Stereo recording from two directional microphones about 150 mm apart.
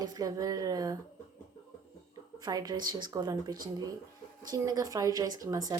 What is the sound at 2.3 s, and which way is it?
A woman's voice, 25° right (ahead or behind).